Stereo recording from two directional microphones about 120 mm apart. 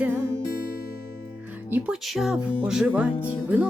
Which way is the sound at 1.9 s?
5° right (ahead or behind).